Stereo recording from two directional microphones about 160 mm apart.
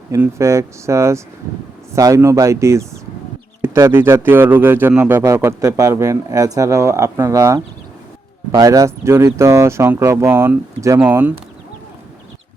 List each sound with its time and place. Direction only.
0.1 s a man's voice: 20° right (ahead or behind)